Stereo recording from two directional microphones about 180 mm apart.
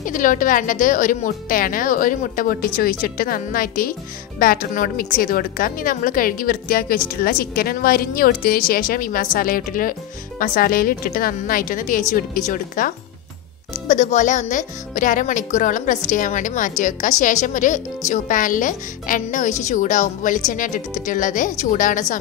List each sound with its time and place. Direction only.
0.0 s a woman's voice: 45° left (ahead or behind)